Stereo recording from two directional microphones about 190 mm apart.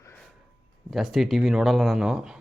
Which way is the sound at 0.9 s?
Centre (ahead or behind).